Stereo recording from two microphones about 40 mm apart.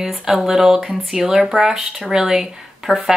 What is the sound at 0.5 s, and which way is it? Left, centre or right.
Speech, centre.